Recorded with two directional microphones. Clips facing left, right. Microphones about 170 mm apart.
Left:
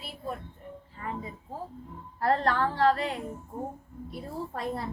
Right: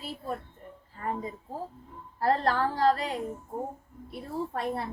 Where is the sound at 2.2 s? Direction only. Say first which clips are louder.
Even; 35° right (ahead or behind).